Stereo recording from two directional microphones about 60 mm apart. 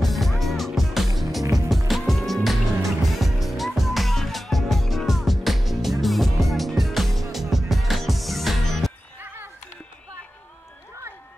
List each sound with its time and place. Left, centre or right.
0.0 s music: centre